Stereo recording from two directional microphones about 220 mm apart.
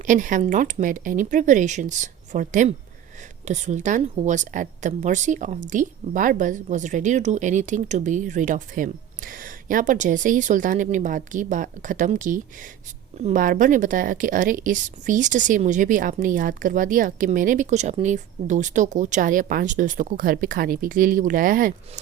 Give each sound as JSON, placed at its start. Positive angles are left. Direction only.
{"t": 0.0, "sound": "speech", "side_deg": -35}